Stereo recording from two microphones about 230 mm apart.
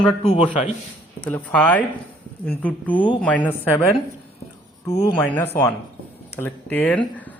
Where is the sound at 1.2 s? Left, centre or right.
Centre.